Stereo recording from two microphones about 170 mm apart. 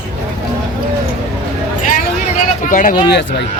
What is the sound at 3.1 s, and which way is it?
Speech, 90° left.